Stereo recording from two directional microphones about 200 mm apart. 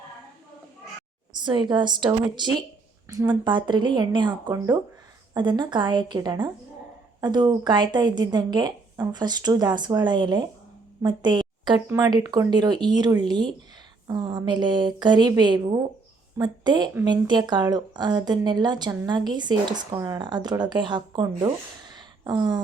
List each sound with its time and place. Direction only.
1.4 s a woman's voice: 20° right (ahead or behind)